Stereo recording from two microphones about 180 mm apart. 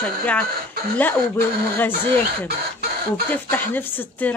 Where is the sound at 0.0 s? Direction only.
5° left (ahead or behind).